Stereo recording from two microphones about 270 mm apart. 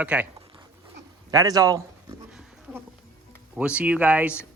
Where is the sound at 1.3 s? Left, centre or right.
Centre.